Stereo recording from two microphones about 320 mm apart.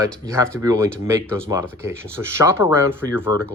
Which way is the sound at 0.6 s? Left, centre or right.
Centre.